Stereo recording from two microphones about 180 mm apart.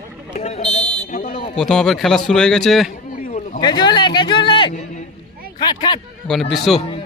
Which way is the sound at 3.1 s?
45° left (ahead or behind).